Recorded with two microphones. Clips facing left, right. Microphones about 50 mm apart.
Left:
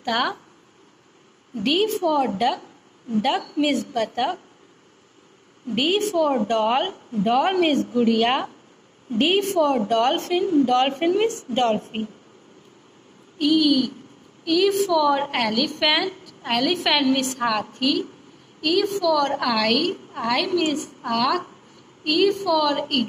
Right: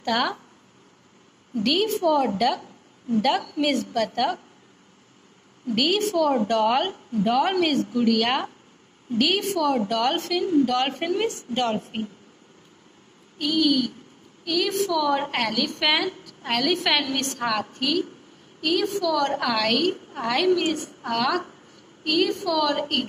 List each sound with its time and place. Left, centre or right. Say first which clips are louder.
0.0 s speech: left 1 dB; centre
1.5 s a woman's voice: left 1 dB; centre
5.7 s a woman's voice: left 1 dB; left
7.9 s a woman's voice: left 2 dB; centre
9.2 s speech: left 3 dB; left
10.2 s a woman's voice: left 2 dB; left
11.2 s a woman's voice: left 4 dB; left
13.4 s a woman's voice: left 3 dB; centre